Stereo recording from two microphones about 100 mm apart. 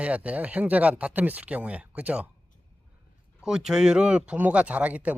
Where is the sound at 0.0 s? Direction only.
15° right (ahead or behind).